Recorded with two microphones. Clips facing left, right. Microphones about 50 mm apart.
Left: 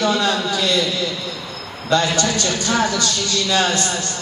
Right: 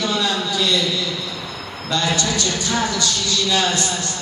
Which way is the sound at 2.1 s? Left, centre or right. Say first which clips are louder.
Left 2 dB; left.